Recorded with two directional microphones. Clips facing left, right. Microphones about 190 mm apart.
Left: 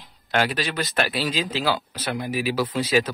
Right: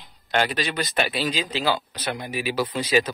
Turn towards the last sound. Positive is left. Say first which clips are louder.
# even
turn(degrees=0)  # may be behind; listen again after turning